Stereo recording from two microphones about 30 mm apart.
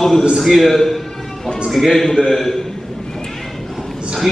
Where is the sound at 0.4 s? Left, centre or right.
Centre.